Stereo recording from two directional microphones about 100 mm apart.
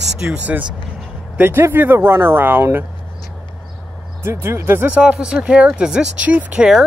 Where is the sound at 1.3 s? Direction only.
25° right (ahead or behind).